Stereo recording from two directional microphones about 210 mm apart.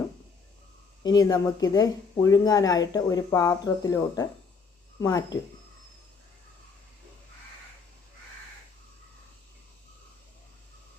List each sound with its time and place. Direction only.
1.0 s speech: 20° left (ahead or behind)